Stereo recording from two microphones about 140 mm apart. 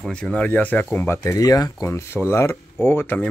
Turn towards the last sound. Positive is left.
turn(degrees=15)  # may be behind; listen again after turning